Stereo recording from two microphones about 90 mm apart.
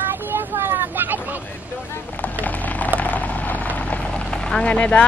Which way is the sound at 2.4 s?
20° left (ahead or behind).